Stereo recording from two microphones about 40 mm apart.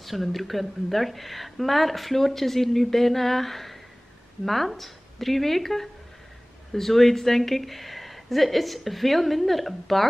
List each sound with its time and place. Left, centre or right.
0.0 s speech: centre